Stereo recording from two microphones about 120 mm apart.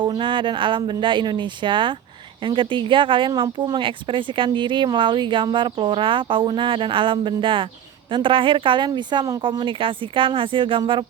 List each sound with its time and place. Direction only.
0.0 s speech: 40° right (ahead or behind)